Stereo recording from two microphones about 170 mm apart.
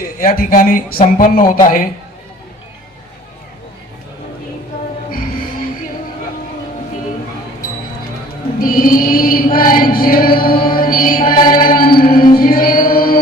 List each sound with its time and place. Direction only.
0.0 s chant: 60° left (ahead or behind)
8.6 s chant: 55° left (ahead or behind)
11.4 s music: 55° left (ahead or behind)